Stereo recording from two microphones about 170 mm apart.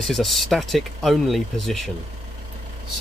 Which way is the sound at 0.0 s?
Centre (ahead or behind).